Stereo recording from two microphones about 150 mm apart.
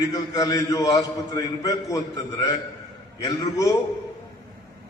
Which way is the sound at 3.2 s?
25° left (ahead or behind).